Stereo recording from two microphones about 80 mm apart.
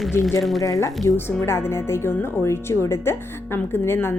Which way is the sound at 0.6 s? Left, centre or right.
Left.